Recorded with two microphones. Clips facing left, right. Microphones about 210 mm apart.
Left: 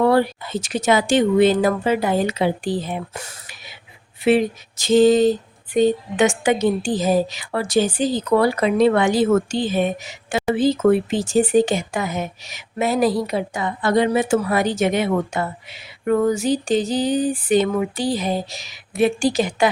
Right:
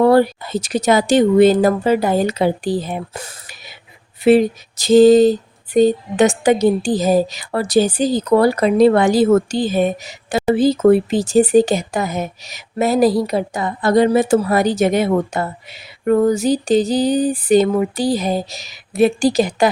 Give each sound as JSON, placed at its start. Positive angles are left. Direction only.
{"t": 0.0, "sound": "a woman's voice", "side_deg": -40}